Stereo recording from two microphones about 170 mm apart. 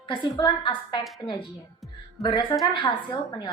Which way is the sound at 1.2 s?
5° left (ahead or behind).